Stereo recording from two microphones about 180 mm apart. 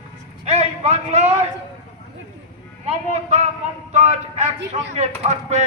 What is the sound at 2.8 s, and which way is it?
A man's voice, 35° right (ahead or behind).